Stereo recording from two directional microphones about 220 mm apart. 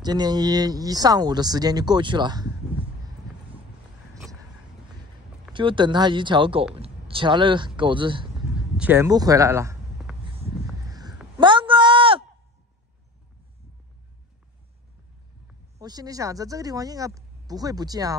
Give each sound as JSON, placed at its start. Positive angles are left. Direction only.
{"t": 0.0, "sound": "speech", "side_deg": -20}
{"t": 5.5, "sound": "speech", "side_deg": -20}
{"t": 8.5, "sound": "speech", "side_deg": -5}
{"t": 10.1, "sound": "a sound", "side_deg": -5}
{"t": 10.9, "sound": "a sound", "side_deg": -20}
{"t": 15.8, "sound": "speech", "side_deg": -15}